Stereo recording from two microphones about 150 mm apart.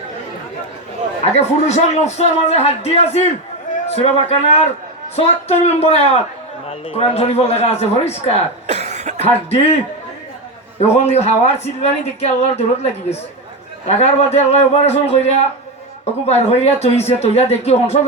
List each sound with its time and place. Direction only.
1.2 s a man's voice: 45° left (ahead or behind)
8.6 s cough: 50° right (ahead or behind)
9.2 s a man's voice: 45° left (ahead or behind)
10.8 s a man's voice: 45° left (ahead or behind)